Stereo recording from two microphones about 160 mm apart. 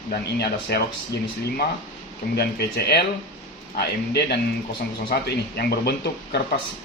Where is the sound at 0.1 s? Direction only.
90° left.